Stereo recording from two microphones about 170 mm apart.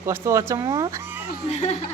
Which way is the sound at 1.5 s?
40° left (ahead or behind).